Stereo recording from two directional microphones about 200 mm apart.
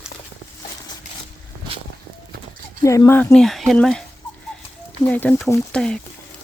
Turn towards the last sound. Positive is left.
turn(degrees=5)  # may be behind; listen again after turning